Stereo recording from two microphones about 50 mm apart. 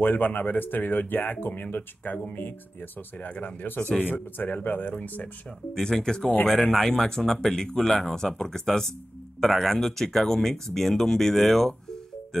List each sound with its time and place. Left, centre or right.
0.0 s speech: left
5.8 s speech: centre